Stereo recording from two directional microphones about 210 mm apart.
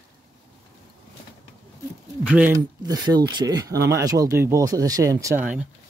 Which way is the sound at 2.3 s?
5° right (ahead or behind).